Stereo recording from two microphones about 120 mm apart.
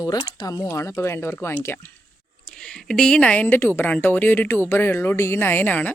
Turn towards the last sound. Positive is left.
turn(degrees=15)  # may be behind; listen again after turning